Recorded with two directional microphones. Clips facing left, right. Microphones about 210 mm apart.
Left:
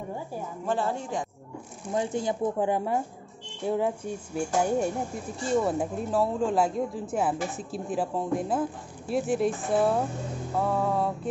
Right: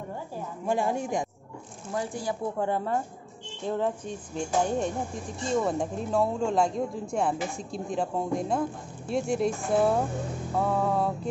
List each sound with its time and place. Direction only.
0.7 s speech: 15° right (ahead or behind)
1.9 s speech: 20° left (ahead or behind); by 11.1 s centre (ahead or behind)